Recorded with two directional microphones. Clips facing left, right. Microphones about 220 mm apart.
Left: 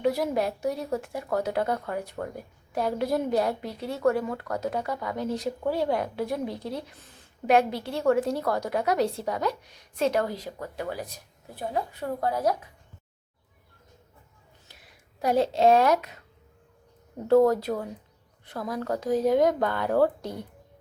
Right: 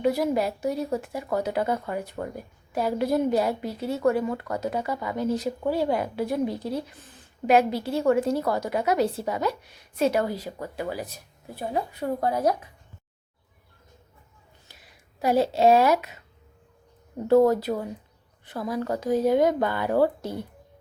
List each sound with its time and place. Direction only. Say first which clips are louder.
0.0 s a woman's voice: right 2 dB; centre (ahead or behind); by 12.5 s 20° right (ahead or behind)
14.7 s speech: even; centre (ahead or behind)
17.2 s a woman's voice: right 1 dB; centre (ahead or behind)